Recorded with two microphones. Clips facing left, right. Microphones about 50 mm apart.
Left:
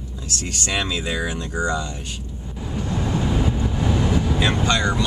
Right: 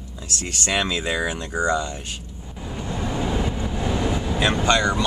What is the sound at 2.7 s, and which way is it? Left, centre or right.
Vehicle, centre.